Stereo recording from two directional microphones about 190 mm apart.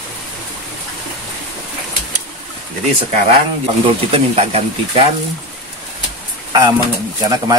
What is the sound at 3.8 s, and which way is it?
Speech, 30° right (ahead or behind).